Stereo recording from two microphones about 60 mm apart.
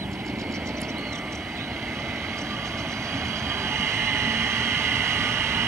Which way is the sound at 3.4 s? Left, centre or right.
Right.